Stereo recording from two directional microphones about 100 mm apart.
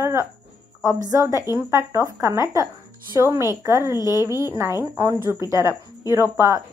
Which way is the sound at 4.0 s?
35° left (ahead or behind).